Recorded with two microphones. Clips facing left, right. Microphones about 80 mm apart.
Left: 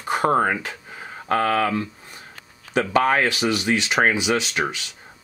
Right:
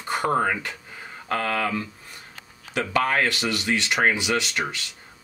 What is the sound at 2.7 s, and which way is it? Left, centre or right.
Speech, left.